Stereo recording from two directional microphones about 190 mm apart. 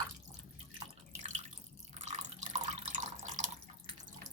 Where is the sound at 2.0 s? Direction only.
40° right (ahead or behind).